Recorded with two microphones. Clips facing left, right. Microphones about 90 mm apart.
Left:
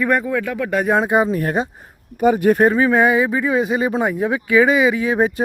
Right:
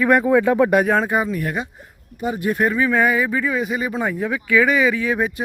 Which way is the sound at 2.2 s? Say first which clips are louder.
Left 8 dB; 55° left (ahead or behind).